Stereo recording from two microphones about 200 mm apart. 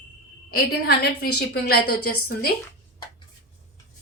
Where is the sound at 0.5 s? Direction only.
50° left (ahead or behind).